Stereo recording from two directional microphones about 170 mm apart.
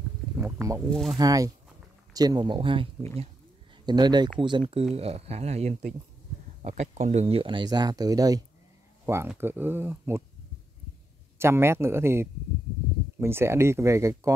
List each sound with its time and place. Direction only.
0.4 s speech: 15° right (ahead or behind)
0.8 s speech: centre (ahead or behind)
1.1 s speech: 20° right (ahead or behind)
11.3 s speech: 15° right (ahead or behind)